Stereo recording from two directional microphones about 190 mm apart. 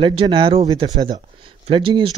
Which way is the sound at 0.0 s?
30° right (ahead or behind).